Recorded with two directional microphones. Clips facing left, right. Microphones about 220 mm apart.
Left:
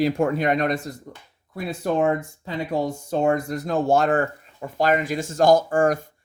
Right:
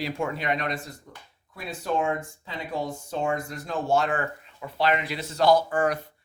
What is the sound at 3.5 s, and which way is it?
Speech, 45° left (ahead or behind).